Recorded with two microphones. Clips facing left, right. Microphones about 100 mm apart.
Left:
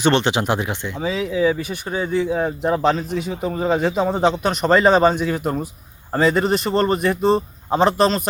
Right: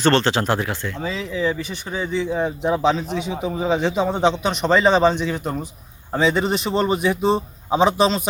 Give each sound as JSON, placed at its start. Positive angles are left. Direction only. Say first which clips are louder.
{"t": 0.0, "sound": "speech", "louder": "even", "side_deg": 15}